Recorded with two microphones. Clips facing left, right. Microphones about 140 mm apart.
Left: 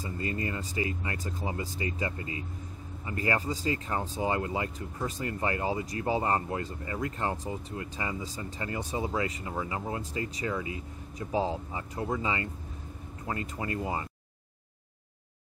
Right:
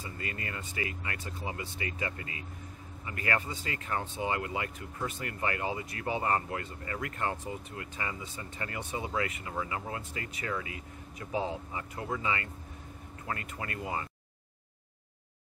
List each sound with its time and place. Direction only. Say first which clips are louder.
0.0 s speech: left 6 dB; 30° left (ahead or behind)